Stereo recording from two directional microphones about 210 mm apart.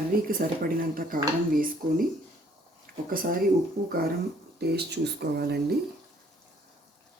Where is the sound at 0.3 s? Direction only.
45° right (ahead or behind).